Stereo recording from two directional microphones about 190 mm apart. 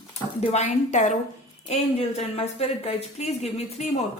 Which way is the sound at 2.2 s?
35° left (ahead or behind).